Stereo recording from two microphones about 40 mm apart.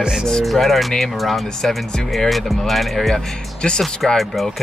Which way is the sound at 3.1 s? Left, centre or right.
Centre.